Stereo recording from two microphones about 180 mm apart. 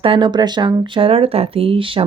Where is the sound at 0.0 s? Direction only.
30° right (ahead or behind).